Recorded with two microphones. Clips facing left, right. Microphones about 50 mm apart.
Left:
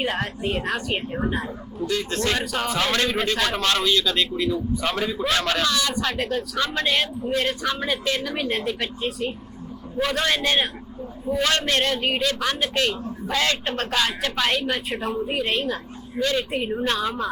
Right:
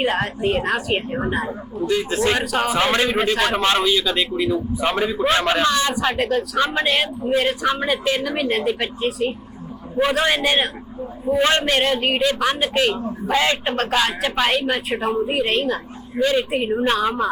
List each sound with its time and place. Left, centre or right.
0.0 s a woman's voice: centre
2.7 s a man's voice: right
6.0 s a woman's voice: centre
6.6 s a woman's voice: centre
10.0 s a woman's voice: centre
16.1 s a woman's voice: centre